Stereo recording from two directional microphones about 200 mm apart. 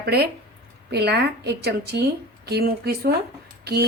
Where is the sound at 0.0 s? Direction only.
50° right (ahead or behind).